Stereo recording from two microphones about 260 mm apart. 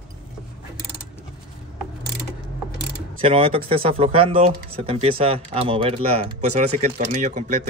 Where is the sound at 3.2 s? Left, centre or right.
Right.